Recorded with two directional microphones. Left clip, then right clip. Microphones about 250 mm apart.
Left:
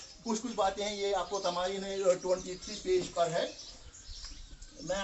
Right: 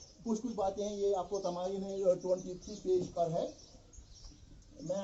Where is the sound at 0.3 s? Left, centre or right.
Left.